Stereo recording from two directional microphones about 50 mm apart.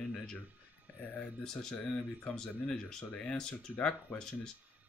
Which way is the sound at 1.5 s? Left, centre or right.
Centre.